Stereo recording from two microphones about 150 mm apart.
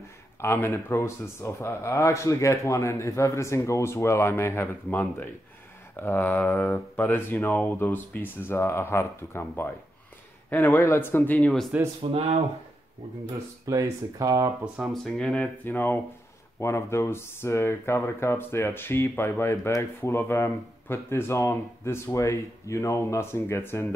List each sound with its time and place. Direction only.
0.4 s speech: 15° left (ahead or behind)
11.3 s speech: centre (ahead or behind)
12.0 s speech: 40° right (ahead or behind)
13.7 s speech: 20° right (ahead or behind)
14.6 s speech: centre (ahead or behind); by 23.9 s 15° left (ahead or behind)